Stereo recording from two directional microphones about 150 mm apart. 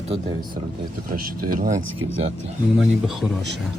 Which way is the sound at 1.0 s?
70° right (ahead or behind).